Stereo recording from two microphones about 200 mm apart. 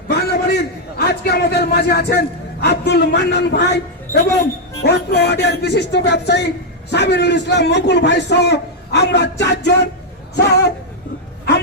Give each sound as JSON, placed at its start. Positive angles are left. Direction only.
{"t": 0.1, "sound": "a man's voice", "side_deg": 50}
{"t": 4.1, "sound": "a woman's voice", "side_deg": 15}
{"t": 4.8, "sound": "a man's voice", "side_deg": 55}